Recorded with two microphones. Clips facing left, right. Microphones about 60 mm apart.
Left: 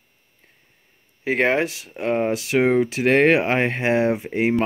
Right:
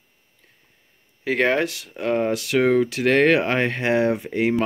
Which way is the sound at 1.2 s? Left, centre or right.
Left.